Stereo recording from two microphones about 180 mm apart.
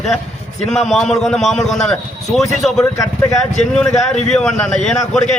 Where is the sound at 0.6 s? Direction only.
5° left (ahead or behind).